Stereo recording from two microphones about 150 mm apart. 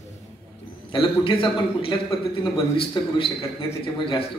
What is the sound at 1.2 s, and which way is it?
Speech, 35° left (ahead or behind).